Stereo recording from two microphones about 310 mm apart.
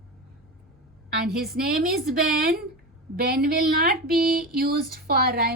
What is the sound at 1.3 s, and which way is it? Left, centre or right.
A woman's voice, right.